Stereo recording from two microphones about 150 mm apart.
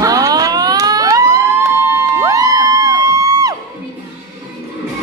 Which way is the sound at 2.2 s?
20° right (ahead or behind).